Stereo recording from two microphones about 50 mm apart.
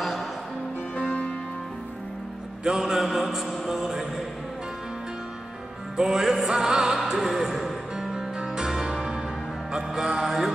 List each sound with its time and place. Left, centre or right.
0.9 s music: left
2.6 s mantra: centre
5.9 s mantra: centre
7.1 s music: centre
8.9 s change ringing: centre
9.9 s mantra: centre